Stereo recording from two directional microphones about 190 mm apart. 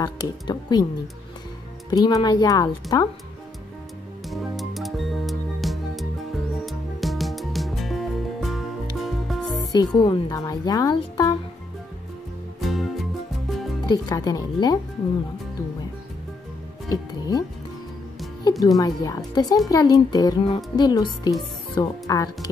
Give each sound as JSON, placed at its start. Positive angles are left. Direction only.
{"t": 0.0, "sound": "speech", "side_deg": 20}
{"t": 1.9, "sound": "speech", "side_deg": 20}
{"t": 4.3, "sound": "music", "side_deg": 0}
{"t": 9.7, "sound": "speech", "side_deg": 20}
{"t": 12.5, "sound": "music", "side_deg": 0}
{"t": 13.8, "sound": "speech", "side_deg": 20}
{"t": 16.9, "sound": "speech", "side_deg": 20}